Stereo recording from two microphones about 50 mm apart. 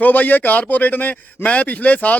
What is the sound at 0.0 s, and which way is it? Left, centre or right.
A man's voice, left.